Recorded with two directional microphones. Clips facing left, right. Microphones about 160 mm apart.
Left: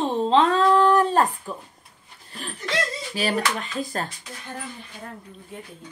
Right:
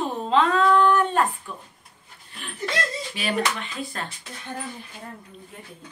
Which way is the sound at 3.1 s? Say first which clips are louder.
Left 2 dB; 40° left (ahead or behind).